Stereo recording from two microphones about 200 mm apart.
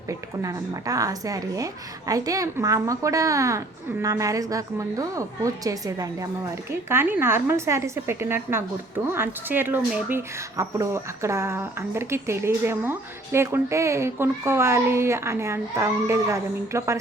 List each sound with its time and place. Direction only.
0.1 s speech: 15° right (ahead or behind)